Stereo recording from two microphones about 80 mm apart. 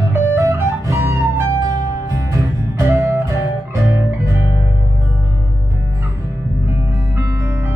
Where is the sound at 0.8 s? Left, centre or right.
Right.